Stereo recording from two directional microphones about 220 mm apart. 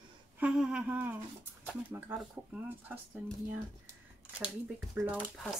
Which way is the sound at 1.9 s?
10° right (ahead or behind).